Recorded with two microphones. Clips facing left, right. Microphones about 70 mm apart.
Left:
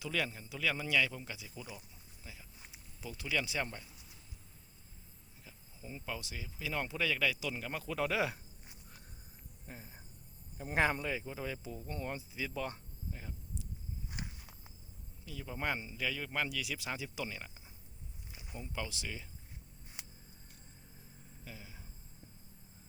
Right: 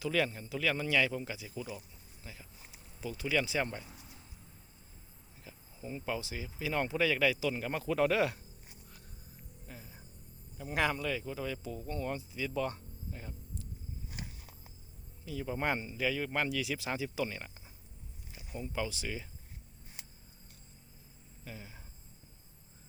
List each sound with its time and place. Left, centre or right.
0.0 s speech: centre
2.2 s a sound: centre
3.0 s speech: centre
5.5 s speech: centre
9.6 s a sound: left
10.6 s speech: left; by 12.5 s centre
12.5 s speech: centre
13.1 s hum: centre
15.4 s speech: centre
21.4 s speech: centre